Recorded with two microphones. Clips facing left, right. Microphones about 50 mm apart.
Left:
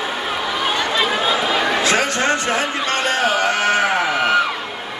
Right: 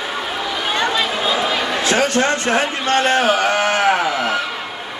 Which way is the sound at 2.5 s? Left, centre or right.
Right.